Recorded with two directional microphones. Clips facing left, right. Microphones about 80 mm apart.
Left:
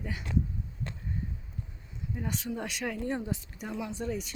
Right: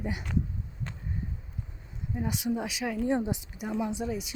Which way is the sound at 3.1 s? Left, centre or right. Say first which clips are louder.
Right 5 dB; centre.